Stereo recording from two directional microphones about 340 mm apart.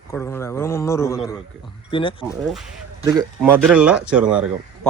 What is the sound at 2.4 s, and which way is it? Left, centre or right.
Speech, centre.